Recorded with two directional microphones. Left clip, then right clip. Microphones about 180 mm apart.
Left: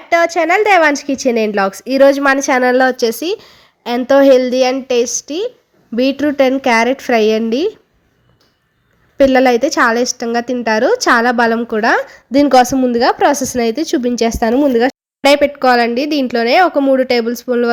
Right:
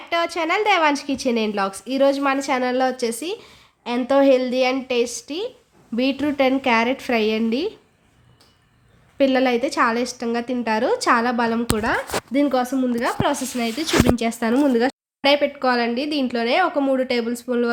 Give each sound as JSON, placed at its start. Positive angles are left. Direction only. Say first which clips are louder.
{"t": 0.1, "sound": "a woman's voice", "louder": "left 9 dB", "side_deg": 20}
{"t": 9.1, "sound": "a woman's voice", "louder": "left 9 dB", "side_deg": 30}
{"t": 14.3, "sound": "a woman's voice", "louder": "left 8 dB", "side_deg": 30}
{"t": 14.5, "sound": "a woman's voice", "louder": "left 4 dB", "side_deg": 15}
{"t": 14.8, "sound": "a woman's voice", "louder": "left 7 dB", "side_deg": 35}